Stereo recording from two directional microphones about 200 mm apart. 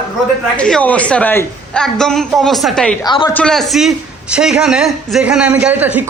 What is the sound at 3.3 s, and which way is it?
A man's voice, 5° left (ahead or behind).